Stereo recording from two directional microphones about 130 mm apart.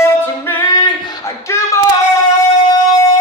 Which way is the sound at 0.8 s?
35° left (ahead or behind).